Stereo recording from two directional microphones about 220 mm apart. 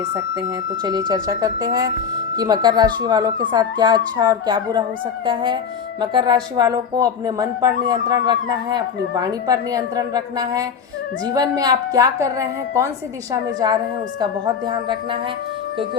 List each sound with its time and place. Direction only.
0.0 s speech: 20° right (ahead or behind)